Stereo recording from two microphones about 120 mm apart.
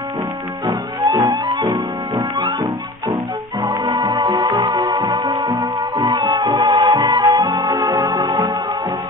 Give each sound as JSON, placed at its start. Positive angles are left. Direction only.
{"t": 0.7, "sound": "music", "side_deg": -30}
{"t": 3.6, "sound": "music", "side_deg": -35}